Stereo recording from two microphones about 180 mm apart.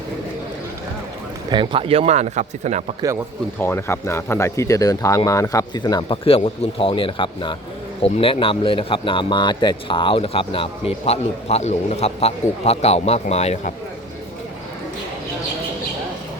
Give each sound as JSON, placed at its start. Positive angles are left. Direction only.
{"t": 1.5, "sound": "speech", "side_deg": -30}
{"t": 3.0, "sound": "speech", "side_deg": -20}
{"t": 3.6, "sound": "a man's voice", "side_deg": 10}